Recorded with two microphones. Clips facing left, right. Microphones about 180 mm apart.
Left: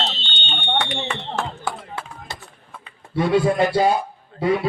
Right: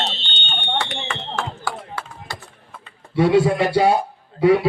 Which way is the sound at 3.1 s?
75° right (ahead or behind).